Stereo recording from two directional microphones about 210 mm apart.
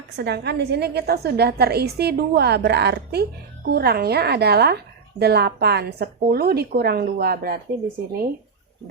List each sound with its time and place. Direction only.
0.2 s a woman's voice: 50° right (ahead or behind)